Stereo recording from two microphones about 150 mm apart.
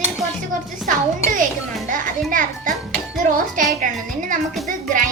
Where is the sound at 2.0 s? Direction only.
65° right (ahead or behind).